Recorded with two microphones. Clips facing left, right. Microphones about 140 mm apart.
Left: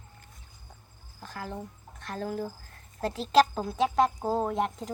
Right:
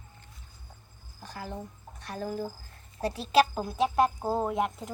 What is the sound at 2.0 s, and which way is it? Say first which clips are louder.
Speech: left 1 dB; 15° right (ahead or behind).